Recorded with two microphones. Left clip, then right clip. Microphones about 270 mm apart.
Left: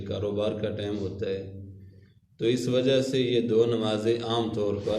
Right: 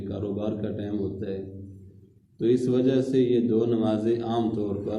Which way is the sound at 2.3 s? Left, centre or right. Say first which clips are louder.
Right 2 dB; left.